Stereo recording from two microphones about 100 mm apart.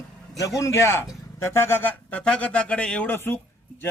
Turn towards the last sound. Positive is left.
turn(degrees=20)  # may be behind; listen again after turning